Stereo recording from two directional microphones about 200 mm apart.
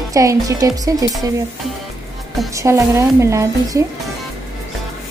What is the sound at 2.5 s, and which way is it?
A woman's voice, 15° right (ahead or behind).